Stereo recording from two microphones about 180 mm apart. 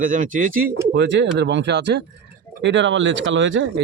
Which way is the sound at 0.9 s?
80° right.